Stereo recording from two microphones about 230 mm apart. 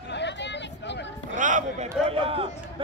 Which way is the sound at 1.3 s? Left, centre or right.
Right.